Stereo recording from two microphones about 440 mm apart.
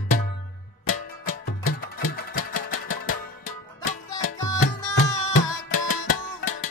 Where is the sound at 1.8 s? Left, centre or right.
Centre.